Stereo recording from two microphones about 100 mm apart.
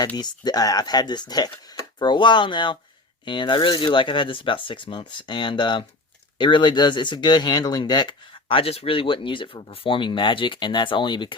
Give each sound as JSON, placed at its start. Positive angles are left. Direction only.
{"t": 0.2, "sound": "speech", "side_deg": 40}
{"t": 8.4, "sound": "speech", "side_deg": 70}